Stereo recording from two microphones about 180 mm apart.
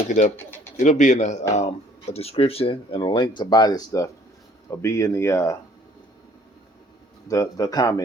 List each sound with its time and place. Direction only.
0.1 s speech: 40° left (ahead or behind); by 5.5 s 15° left (ahead or behind)
7.3 s speech: 20° left (ahead or behind)